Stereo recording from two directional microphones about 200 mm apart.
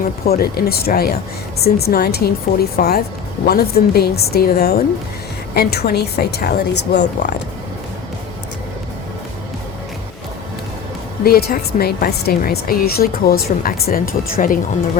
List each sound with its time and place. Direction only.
0.0 s speech: 50° left (ahead or behind)
11.2 s speech: 50° left (ahead or behind)